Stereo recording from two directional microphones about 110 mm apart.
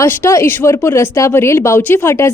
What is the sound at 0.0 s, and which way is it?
A woman's voice, 25° left (ahead or behind).